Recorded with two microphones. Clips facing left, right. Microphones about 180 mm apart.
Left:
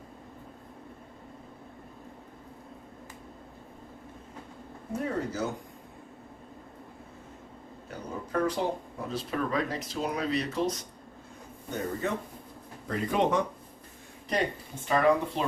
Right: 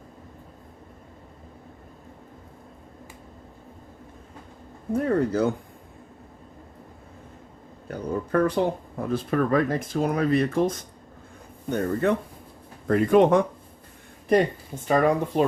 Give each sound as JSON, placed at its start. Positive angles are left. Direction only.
{"t": 4.9, "sound": "speech", "side_deg": -60}
{"t": 7.9, "sound": "a sound", "side_deg": -60}
{"t": 9.0, "sound": "speech", "side_deg": -50}